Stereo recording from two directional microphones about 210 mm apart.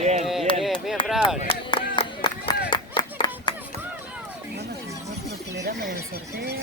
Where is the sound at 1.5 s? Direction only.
25° left (ahead or behind).